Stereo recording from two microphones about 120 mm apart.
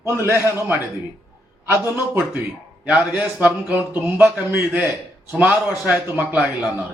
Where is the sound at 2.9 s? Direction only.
10° right (ahead or behind).